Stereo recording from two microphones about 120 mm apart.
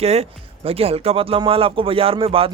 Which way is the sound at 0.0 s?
60° right (ahead or behind).